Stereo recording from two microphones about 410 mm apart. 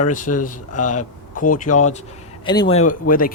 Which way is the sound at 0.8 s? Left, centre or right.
Left.